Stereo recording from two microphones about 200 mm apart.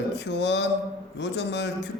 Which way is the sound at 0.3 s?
60° left (ahead or behind).